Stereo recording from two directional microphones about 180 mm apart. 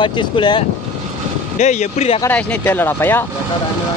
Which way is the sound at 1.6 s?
40° left (ahead or behind).